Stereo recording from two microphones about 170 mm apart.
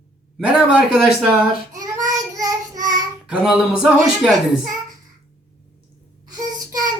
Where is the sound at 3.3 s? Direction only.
5° right (ahead or behind).